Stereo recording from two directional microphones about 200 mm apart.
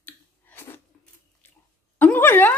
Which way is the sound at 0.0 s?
10° left (ahead or behind).